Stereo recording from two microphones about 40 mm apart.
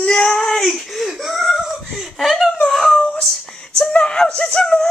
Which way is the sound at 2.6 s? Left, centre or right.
Centre.